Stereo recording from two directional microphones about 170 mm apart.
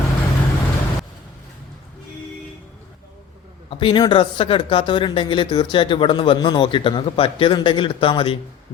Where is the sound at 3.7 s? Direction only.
30° left (ahead or behind).